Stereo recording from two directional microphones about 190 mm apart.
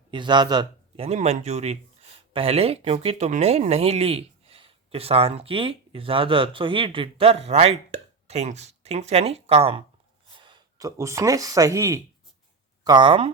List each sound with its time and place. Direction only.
0.1 s a man's voice: 25° right (ahead or behind)